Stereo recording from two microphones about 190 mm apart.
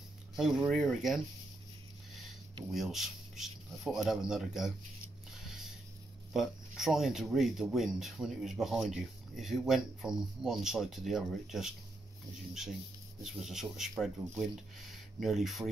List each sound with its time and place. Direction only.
0.4 s speech: 5° right (ahead or behind)
2.7 s speech: centre (ahead or behind)
5.4 s a sound: centre (ahead or behind)
6.3 s speech: centre (ahead or behind)
13.2 s speech: centre (ahead or behind)